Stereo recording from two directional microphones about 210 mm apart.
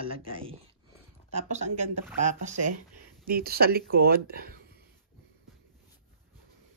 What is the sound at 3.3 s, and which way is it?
Speech, 45° right (ahead or behind).